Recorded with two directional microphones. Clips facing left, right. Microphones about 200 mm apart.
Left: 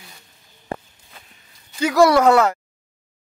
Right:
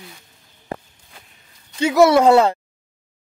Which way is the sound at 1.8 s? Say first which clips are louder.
Right 1 dB; 25° right (ahead or behind).